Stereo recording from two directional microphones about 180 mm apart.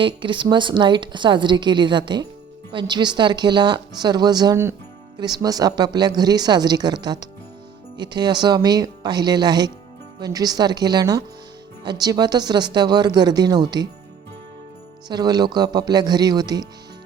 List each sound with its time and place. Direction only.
0.0 s a woman's voice: 25° right (ahead or behind)
15.0 s a woman's voice: 25° right (ahead or behind)